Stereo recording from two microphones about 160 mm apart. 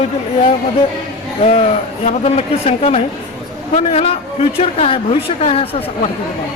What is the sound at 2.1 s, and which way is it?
A man's voice, 40° left (ahead or behind).